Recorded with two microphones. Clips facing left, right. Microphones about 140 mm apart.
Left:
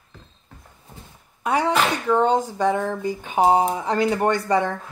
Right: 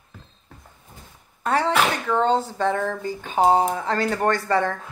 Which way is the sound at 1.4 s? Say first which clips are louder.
Even; 15° left (ahead or behind).